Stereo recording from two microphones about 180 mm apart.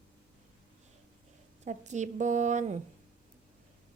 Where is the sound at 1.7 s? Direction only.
40° right (ahead or behind).